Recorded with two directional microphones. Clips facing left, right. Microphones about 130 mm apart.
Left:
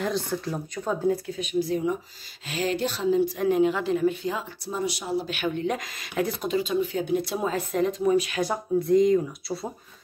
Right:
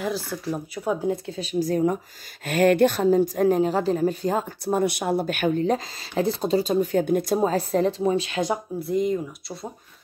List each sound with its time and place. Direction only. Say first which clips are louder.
0.0 s speech: even; 5° right (ahead or behind)
1.0 s speech: left 1 dB; 25° right (ahead or behind)
8.7 s speech: left 7 dB; 5° right (ahead or behind)